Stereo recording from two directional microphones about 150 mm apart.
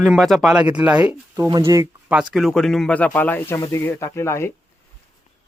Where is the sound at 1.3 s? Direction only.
20° right (ahead or behind).